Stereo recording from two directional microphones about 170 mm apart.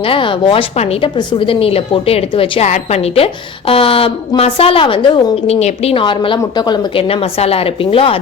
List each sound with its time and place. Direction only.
0.0 s a woman's voice: 30° left (ahead or behind)